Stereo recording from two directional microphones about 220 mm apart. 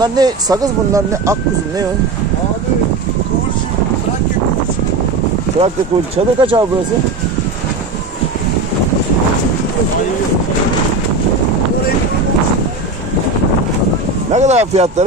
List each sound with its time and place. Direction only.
0.0 s speech: 20° right (ahead or behind)
6.1 s speech: 25° right (ahead or behind)
14.3 s speech: 30° right (ahead or behind)